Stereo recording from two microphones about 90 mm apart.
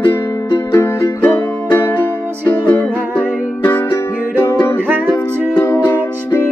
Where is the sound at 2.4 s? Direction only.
20° left (ahead or behind).